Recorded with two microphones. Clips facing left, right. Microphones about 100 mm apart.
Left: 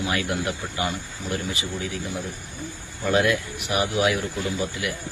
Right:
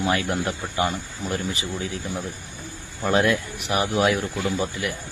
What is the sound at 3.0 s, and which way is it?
Speech, 35° right (ahead or behind).